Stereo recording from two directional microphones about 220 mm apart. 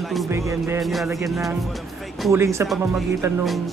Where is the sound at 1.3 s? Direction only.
Centre (ahead or behind).